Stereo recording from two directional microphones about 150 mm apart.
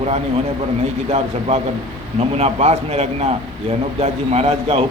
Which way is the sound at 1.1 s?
45° right (ahead or behind).